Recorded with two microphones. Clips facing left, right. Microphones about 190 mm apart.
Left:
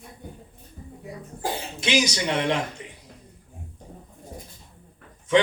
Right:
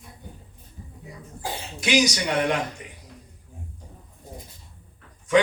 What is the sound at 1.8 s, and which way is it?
Speech, 25° left (ahead or behind).